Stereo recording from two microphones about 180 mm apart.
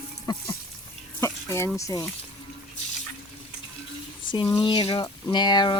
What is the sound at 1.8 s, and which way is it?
Speech, 20° left (ahead or behind).